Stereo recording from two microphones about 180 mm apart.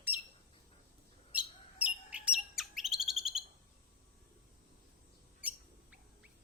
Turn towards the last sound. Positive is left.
turn(degrees=-5)  # may be behind; listen again after turning